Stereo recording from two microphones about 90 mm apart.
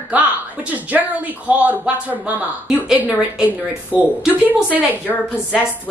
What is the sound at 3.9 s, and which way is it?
Speech, 5° right (ahead or behind).